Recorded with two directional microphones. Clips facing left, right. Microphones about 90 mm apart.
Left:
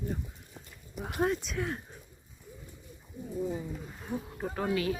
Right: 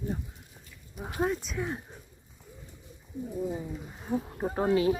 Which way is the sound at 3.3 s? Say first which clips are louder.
Even; 15° right (ahead or behind).